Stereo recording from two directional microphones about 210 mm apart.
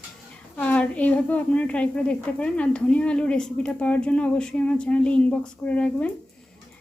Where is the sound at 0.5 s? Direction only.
5° left (ahead or behind).